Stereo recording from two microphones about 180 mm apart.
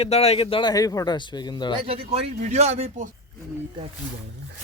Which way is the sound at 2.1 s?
40° right (ahead or behind).